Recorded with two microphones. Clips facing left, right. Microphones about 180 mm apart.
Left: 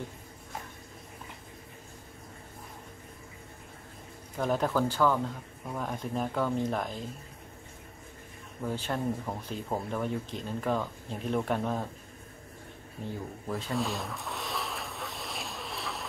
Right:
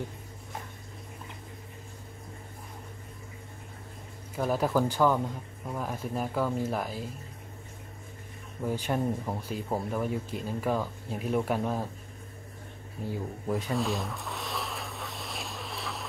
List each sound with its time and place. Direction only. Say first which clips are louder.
4.4 s speech: right 1 dB; 5° right (ahead or behind)
8.6 s speech: right 2 dB; 15° right (ahead or behind)
13.5 s speech: right 4 dB; 15° right (ahead or behind)
13.7 s a sound: right 2 dB; centre (ahead or behind)